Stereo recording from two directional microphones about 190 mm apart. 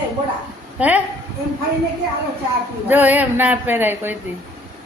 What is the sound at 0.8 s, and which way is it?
Speech, 10° right (ahead or behind).